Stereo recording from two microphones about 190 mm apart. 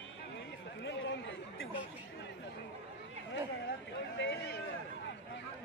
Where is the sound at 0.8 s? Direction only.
75° left (ahead or behind).